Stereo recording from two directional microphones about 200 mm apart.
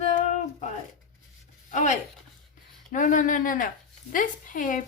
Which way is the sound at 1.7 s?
35° left (ahead or behind).